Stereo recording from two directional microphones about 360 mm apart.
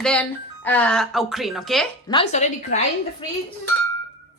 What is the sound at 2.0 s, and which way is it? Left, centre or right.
Speech, centre.